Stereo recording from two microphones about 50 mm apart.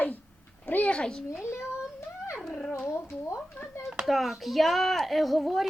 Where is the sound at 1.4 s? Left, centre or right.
Left.